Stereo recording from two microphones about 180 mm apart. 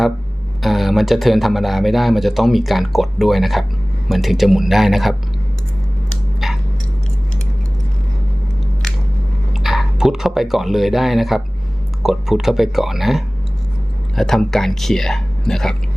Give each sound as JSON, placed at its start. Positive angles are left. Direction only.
{"t": 0.6, "sound": "speech", "side_deg": 0}
{"t": 6.4, "sound": "a sound", "side_deg": 0}
{"t": 9.5, "sound": "speech", "side_deg": 0}